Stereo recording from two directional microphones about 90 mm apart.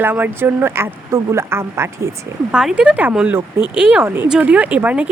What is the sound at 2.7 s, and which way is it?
Speech, 15° right (ahead or behind).